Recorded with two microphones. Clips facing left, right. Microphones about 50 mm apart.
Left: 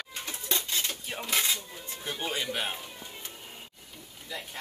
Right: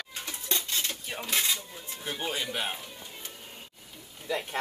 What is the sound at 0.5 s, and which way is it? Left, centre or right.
Dishes, centre.